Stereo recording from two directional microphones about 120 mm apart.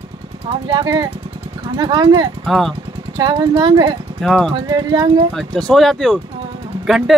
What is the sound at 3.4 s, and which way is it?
Speech, 40° right (ahead or behind).